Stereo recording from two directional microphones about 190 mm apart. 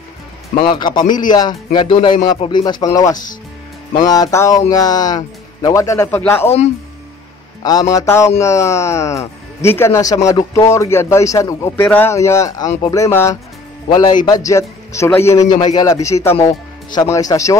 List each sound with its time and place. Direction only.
0.6 s a man's voice: 25° left (ahead or behind)
7.6 s a man's voice: 20° left (ahead or behind)